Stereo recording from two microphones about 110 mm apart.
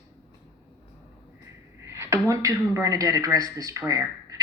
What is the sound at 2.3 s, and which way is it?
Speech, 30° right (ahead or behind).